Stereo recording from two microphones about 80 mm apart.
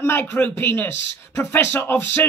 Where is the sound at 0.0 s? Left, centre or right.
Left.